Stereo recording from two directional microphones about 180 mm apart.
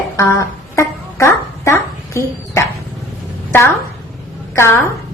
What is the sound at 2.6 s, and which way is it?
Dog, 15° left (ahead or behind).